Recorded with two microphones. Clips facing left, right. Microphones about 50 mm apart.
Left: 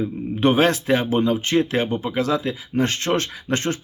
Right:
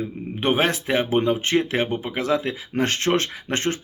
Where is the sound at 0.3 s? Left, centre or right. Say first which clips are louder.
Left 4 dB; centre.